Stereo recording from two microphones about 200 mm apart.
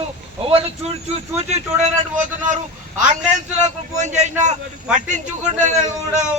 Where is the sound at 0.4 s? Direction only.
30° right (ahead or behind).